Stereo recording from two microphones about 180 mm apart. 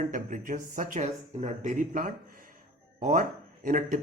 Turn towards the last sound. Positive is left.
turn(degrees=-50)  # may be behind; listen again after turning